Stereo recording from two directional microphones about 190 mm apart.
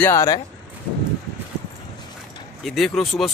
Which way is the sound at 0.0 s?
15° left (ahead or behind).